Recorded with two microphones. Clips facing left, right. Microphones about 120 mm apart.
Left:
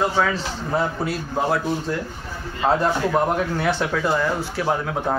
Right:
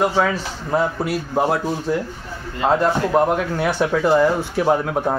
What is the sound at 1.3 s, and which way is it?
Speech, 15° right (ahead or behind).